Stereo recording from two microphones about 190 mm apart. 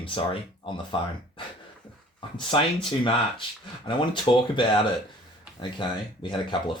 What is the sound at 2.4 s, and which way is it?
Speech, 25° left (ahead or behind).